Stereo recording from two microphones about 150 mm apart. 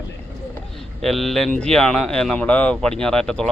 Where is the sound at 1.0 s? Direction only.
Centre (ahead or behind).